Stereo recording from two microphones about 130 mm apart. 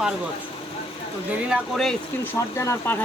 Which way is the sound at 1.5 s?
Centre (ahead or behind).